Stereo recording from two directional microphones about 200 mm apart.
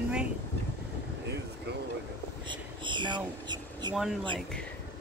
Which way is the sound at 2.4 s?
25° right (ahead or behind).